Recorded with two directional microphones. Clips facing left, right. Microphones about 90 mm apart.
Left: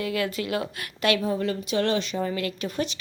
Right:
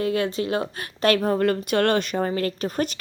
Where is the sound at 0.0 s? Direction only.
30° right (ahead or behind).